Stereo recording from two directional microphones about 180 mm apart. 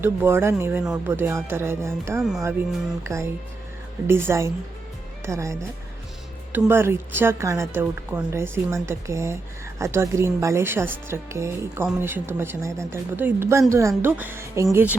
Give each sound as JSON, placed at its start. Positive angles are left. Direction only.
{"t": 0.0, "sound": "speech", "side_deg": -10}